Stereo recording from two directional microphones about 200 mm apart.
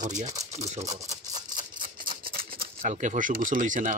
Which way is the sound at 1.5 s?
45° right (ahead or behind).